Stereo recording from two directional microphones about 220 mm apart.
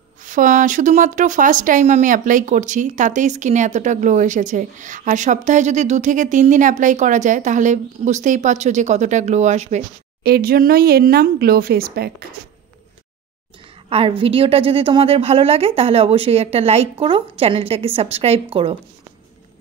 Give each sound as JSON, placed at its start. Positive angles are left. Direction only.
{"t": 0.2, "sound": "speech", "side_deg": -35}
{"t": 10.2, "sound": "speech", "side_deg": -45}
{"t": 13.8, "sound": "a woman's voice", "side_deg": -25}